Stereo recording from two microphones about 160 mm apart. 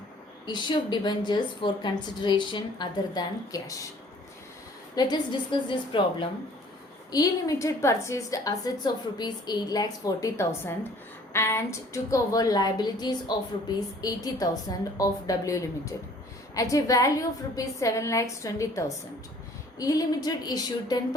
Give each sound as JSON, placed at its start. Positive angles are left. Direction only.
{"t": 0.4, "sound": "a woman's voice", "side_deg": 30}
{"t": 4.9, "sound": "a woman's voice", "side_deg": 25}